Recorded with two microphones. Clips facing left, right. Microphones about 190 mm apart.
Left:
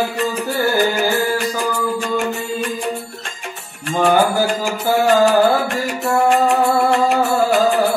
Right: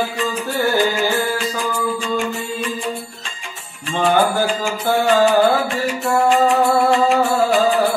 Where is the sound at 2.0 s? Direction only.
65° left (ahead or behind).